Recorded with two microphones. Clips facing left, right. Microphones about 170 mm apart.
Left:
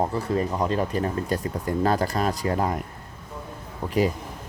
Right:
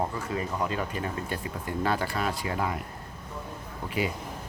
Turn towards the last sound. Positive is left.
turn(degrees=40)  # may be behind; listen again after turning